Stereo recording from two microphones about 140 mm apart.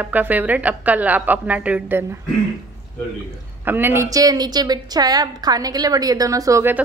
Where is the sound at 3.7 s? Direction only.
15° right (ahead or behind).